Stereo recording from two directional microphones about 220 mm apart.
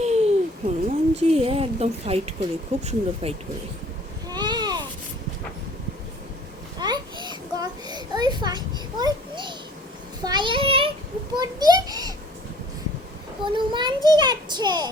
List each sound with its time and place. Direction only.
0.0 s a child's voice: 30° right (ahead or behind)
4.3 s a sound: 20° right (ahead or behind)
6.7 s a sound: 20° right (ahead or behind)
10.2 s child singing: 20° right (ahead or behind)
11.3 s a child's voice: 20° right (ahead or behind)
13.4 s a child's voice: 20° right (ahead or behind)